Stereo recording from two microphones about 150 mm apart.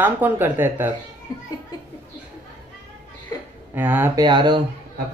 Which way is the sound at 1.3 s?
25° left (ahead or behind).